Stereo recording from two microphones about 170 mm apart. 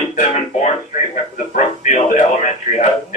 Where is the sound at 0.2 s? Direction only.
45° left (ahead or behind).